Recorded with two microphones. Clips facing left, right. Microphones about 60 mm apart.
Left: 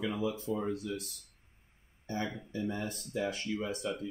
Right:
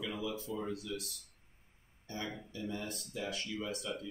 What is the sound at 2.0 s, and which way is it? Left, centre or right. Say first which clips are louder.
Speech: left 5 dB; left.